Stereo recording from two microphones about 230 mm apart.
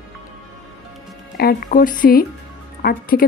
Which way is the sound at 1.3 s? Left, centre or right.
Left.